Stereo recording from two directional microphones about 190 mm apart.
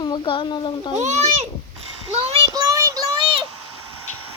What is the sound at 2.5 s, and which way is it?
Child singing, 20° right (ahead or behind).